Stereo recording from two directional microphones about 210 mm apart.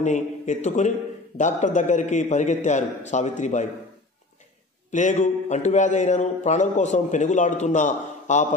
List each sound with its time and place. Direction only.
0.0 s a man's voice: 35° left (ahead or behind)
4.9 s a man's voice: 35° left (ahead or behind)